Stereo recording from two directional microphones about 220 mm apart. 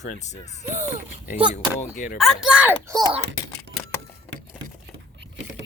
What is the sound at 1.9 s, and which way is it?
Speech, 35° left (ahead or behind).